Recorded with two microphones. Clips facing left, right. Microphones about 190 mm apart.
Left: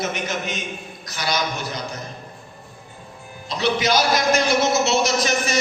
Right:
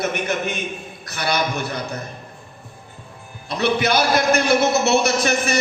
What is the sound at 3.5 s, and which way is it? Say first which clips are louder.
A man's voice: right 1 dB; 55° right (ahead or behind).